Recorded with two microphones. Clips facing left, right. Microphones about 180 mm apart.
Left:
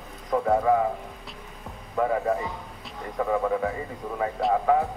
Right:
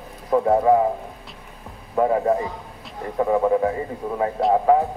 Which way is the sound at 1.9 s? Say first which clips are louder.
Right 5 dB; 35° right (ahead or behind).